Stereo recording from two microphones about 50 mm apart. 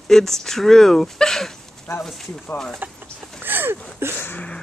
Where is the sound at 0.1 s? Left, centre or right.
Centre.